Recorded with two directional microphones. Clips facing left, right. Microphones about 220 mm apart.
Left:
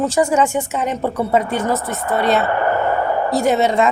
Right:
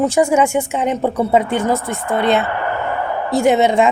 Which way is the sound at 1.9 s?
25° right (ahead or behind).